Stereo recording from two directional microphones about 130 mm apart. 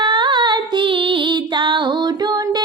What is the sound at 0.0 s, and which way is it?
Female singing, 35° right (ahead or behind).